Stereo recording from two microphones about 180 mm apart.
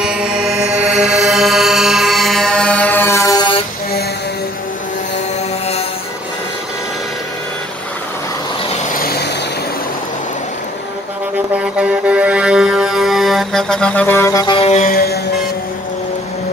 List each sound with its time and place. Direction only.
0.0 s music: 5° right (ahead or behind); by 3.4 s 20° left (ahead or behind)
8.9 s vehicle: 55° left (ahead or behind)
11.5 s music: 5° right (ahead or behind); by 14.9 s 35° left (ahead or behind)
14.9 s music: 55° left (ahead or behind)